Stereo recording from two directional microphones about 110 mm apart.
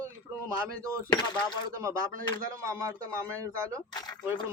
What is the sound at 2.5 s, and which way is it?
Speech, 30° right (ahead or behind).